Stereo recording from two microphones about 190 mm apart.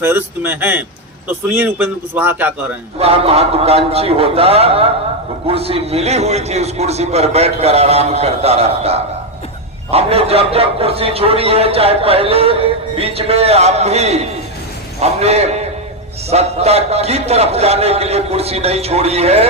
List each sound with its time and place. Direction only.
0.0 s a man's voice: 10° right (ahead or behind)
3.0 s a man's voice: 30° right (ahead or behind)